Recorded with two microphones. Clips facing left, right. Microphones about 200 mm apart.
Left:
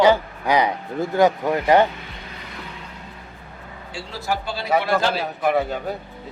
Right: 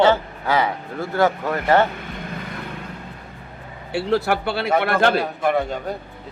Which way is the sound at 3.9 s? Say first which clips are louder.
Right 8 dB; 65° right (ahead or behind).